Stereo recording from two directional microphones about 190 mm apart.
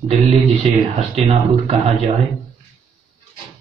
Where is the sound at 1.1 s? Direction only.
35° right (ahead or behind).